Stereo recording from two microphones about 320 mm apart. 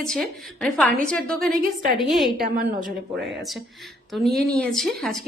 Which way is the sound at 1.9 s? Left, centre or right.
Centre.